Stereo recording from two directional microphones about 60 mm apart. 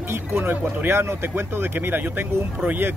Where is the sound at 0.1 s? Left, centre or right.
Right.